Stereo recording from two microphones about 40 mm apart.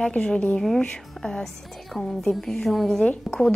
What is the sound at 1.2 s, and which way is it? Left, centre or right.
Speech, centre.